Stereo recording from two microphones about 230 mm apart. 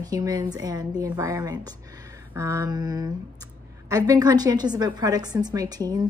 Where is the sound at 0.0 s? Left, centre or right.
Centre.